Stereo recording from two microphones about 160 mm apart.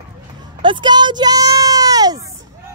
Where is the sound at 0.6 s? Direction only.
30° right (ahead or behind).